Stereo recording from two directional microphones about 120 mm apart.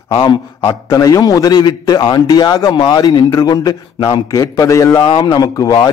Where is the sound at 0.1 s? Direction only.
40° left (ahead or behind).